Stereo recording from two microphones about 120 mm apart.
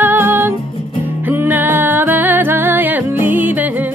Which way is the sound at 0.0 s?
20° right (ahead or behind).